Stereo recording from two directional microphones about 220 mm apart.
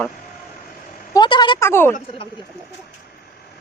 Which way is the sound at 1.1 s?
20° left (ahead or behind).